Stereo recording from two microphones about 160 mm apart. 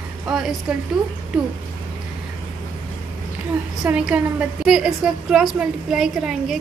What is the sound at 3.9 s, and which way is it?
A woman's voice, 10° right (ahead or behind).